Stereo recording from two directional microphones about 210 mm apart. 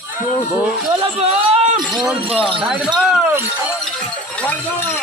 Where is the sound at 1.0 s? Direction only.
30° right (ahead or behind).